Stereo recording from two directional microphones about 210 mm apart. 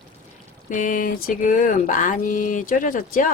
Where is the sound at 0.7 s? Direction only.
40° left (ahead or behind).